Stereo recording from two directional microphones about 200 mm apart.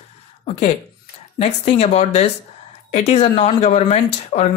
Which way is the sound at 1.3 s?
30° left (ahead or behind).